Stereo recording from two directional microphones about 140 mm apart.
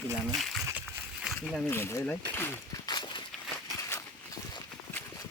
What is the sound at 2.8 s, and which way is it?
Walk, 30° left (ahead or behind).